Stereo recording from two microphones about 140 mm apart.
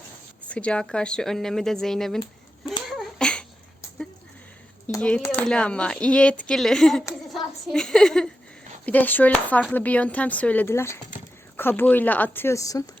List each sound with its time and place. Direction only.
0.4 s speech: 10° left (ahead or behind)
2.8 s a sound: centre (ahead or behind)
4.9 s a woman's voice: 10° left (ahead or behind)
5.5 s a woman's voice: 10° left (ahead or behind); by 12.8 s 25° left (ahead or behind)